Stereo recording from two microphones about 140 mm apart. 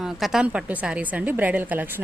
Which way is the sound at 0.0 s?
5° right (ahead or behind).